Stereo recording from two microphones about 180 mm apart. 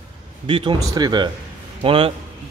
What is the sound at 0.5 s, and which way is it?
A man's voice, 25° right (ahead or behind).